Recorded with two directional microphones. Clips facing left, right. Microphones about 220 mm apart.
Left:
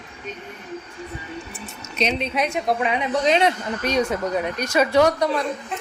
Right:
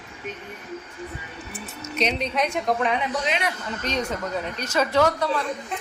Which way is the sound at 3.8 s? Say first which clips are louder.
Left 6 dB; 10° left (ahead or behind).